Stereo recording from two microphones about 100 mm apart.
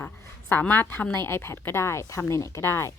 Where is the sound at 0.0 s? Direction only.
20° left (ahead or behind).